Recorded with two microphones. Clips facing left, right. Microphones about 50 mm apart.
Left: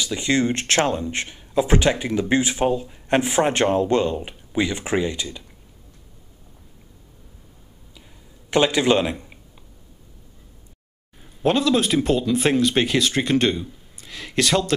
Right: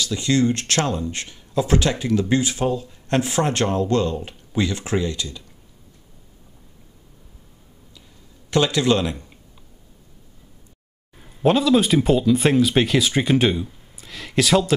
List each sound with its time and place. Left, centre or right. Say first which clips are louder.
0.0 s speech: right 1 dB; left
8.5 s speech: left 1 dB; left
11.4 s speech: right 2 dB; centre